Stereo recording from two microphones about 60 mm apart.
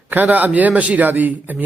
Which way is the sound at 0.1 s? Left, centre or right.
Right.